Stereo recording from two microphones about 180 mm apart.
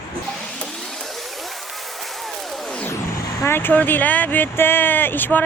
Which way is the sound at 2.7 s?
5° left (ahead or behind).